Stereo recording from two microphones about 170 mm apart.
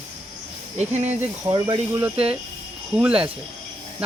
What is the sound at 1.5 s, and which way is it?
Speech, 20° right (ahead or behind).